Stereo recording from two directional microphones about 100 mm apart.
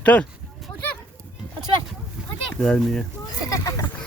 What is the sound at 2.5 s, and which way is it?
Speech, 10° left (ahead or behind).